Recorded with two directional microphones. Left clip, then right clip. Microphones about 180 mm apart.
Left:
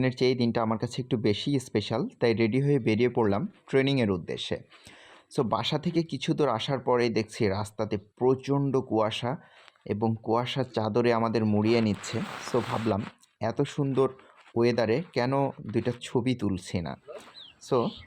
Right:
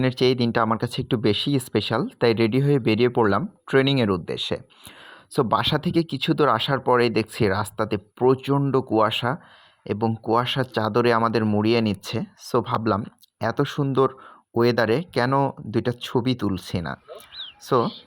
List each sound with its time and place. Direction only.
0.0 s speech: 20° right (ahead or behind)